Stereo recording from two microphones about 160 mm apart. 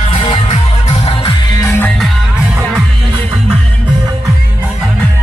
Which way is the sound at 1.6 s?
15° left (ahead or behind).